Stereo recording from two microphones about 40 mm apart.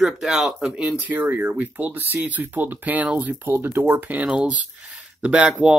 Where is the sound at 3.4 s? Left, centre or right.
Right.